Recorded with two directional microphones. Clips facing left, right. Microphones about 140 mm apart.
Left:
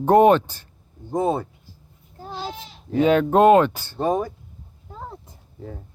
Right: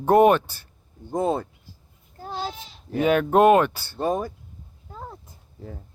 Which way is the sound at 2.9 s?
25° left (ahead or behind).